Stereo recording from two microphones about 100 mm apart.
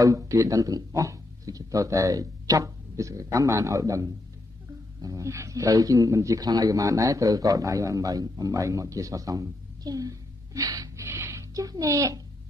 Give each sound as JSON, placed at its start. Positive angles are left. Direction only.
{"t": 0.0, "sound": "speech", "side_deg": -35}
{"t": 11.1, "sound": "a sound", "side_deg": -25}
{"t": 11.5, "sound": "speech", "side_deg": -40}